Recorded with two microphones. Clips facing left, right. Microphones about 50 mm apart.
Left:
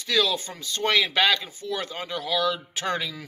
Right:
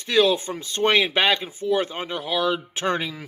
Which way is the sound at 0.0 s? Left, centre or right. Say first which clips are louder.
Right 5 dB; right.